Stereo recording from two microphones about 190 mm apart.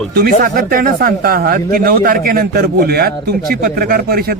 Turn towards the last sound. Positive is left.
turn(degrees=-50)  # may be behind; listen again after turning